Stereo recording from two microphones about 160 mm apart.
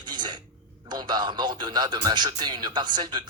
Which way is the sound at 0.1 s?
30° right (ahead or behind).